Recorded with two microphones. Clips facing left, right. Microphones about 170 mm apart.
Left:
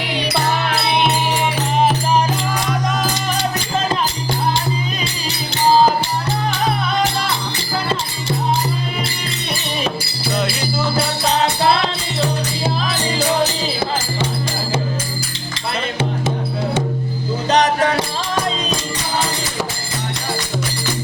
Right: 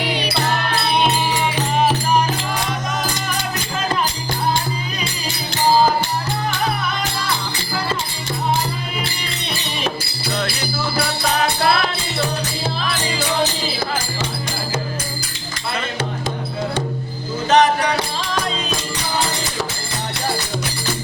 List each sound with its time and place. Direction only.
10.9 s music: 25° left (ahead or behind)
17.5 s music: 40° left (ahead or behind)